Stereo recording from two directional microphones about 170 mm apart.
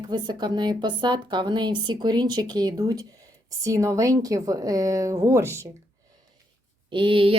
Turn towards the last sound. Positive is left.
turn(degrees=-30)  # may be behind; listen again after turning